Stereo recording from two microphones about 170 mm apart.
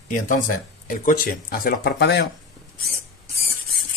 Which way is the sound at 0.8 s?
55° left (ahead or behind).